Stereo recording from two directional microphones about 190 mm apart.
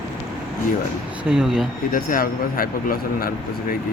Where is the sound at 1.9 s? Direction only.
50° left (ahead or behind).